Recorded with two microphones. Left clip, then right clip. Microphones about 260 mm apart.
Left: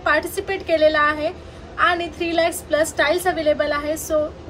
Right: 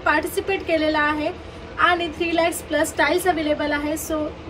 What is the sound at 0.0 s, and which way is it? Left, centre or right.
A woman's voice, centre.